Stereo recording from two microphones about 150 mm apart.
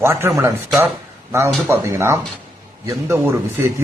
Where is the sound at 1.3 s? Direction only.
15° right (ahead or behind).